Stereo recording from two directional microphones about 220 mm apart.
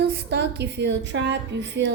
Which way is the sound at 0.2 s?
50° right (ahead or behind).